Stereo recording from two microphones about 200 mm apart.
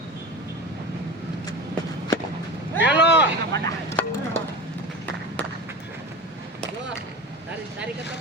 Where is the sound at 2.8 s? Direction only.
60° left (ahead or behind).